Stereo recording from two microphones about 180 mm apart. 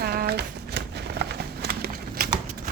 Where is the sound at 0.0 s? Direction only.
60° right (ahead or behind).